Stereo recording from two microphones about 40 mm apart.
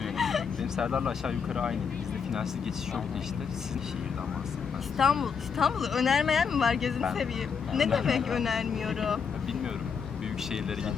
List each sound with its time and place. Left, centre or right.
0.2 s a sound: centre
0.8 s speech: centre
4.9 s speech: centre